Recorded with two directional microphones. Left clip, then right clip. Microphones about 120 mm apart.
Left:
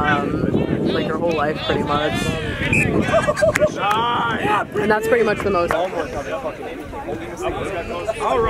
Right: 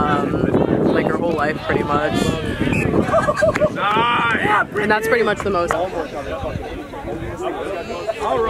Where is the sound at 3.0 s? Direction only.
20° left (ahead or behind).